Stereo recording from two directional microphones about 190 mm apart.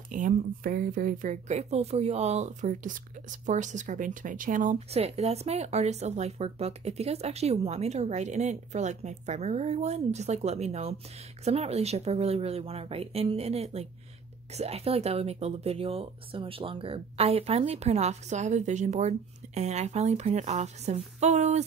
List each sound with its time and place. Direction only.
0.1 s speech: 45° right (ahead or behind)